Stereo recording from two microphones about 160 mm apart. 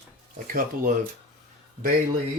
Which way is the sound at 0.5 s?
60° right (ahead or behind).